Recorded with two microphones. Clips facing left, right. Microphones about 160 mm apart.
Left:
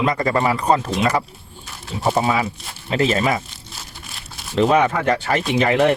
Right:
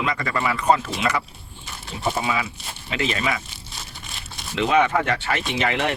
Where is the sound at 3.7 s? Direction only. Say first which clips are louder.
Even; 5° left (ahead or behind).